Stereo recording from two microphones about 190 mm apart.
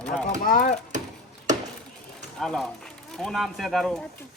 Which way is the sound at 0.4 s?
45° left (ahead or behind).